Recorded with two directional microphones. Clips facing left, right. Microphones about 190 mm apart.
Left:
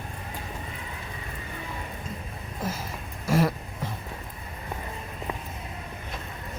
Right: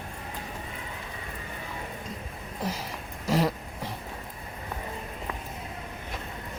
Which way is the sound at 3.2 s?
15° right (ahead or behind).